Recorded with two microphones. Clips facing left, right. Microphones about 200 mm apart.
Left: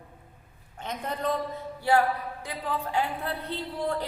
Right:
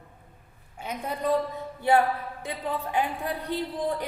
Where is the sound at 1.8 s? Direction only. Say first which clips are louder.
Right 1 dB; 20° right (ahead or behind).